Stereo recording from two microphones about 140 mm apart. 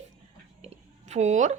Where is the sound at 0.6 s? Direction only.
55° right (ahead or behind).